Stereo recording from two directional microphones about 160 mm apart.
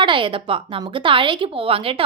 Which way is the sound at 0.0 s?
30° right (ahead or behind).